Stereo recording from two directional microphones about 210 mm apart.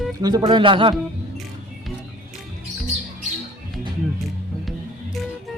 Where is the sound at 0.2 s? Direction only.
20° right (ahead or behind).